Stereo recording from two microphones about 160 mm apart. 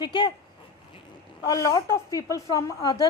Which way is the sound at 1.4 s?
20° left (ahead or behind).